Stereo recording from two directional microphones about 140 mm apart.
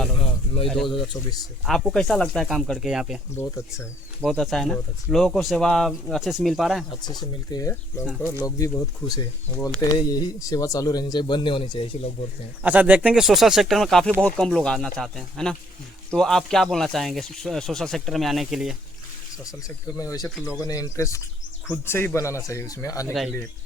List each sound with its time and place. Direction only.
0.2 s a sound: 40° left (ahead or behind)
1.6 s speech: centre (ahead or behind)
3.3 s speech: 20° left (ahead or behind)
4.3 s speech: centre (ahead or behind)
7.0 s speech: 30° left (ahead or behind)
8.2 s speech: 15° left (ahead or behind); by 12.1 s 40° left (ahead or behind)
12.6 s speech: 10° right (ahead or behind)
19.5 s speech: 25° left (ahead or behind)